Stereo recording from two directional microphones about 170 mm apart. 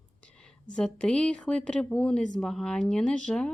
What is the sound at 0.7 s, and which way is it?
A woman's voice, 5° left (ahead or behind).